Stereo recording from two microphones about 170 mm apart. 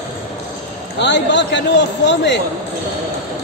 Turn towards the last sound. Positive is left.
turn(degrees=90)